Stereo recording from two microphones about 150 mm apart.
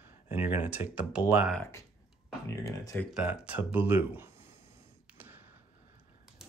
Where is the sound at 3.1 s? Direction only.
5° right (ahead or behind).